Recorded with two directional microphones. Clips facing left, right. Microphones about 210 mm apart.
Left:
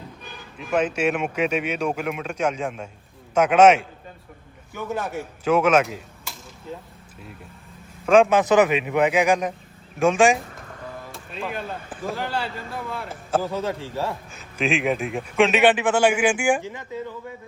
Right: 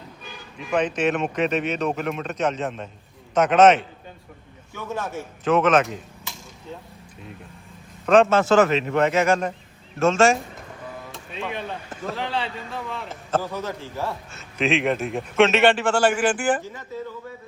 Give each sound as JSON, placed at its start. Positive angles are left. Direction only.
{"t": 0.5, "sound": "speech", "side_deg": 5}
{"t": 8.0, "sound": "speech", "side_deg": 10}
{"t": 10.9, "sound": "music", "side_deg": 0}
{"t": 12.0, "sound": "speech", "side_deg": 0}
{"t": 13.5, "sound": "a man's voice", "side_deg": 30}
{"t": 14.6, "sound": "speech", "side_deg": 0}